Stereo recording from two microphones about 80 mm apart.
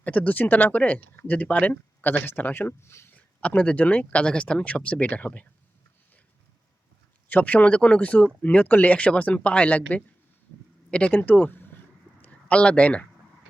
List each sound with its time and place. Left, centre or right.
0.0 s speech: centre; by 3.1 s left
3.2 s speech: centre
7.3 s speech: centre